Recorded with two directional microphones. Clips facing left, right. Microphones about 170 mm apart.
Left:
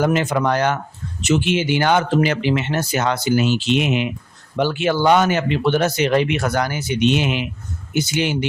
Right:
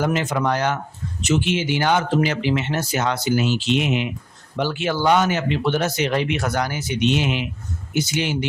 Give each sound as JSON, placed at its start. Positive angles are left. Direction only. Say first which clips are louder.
{"t": 0.0, "sound": "speech", "louder": "left 3 dB", "side_deg": 55}